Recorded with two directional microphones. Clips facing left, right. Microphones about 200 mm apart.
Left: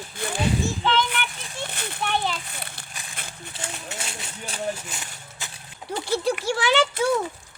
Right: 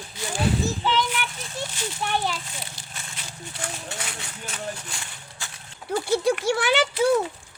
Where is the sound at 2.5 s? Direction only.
60° left (ahead or behind).